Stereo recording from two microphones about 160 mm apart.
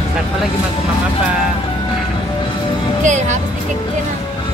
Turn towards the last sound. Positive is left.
turn(degrees=-50)  # may be behind; listen again after turning